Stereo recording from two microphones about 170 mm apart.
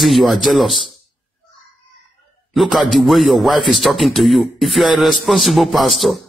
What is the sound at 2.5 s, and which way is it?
A man's voice, centre (ahead or behind).